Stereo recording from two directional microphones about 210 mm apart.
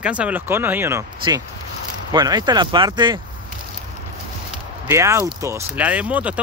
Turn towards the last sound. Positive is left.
turn(degrees=-5)  # may be behind; listen again after turning